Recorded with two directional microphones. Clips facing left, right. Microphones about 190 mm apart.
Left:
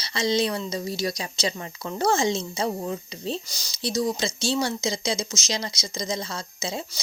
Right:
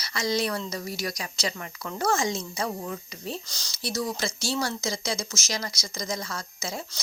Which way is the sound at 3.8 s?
20° left (ahead or behind).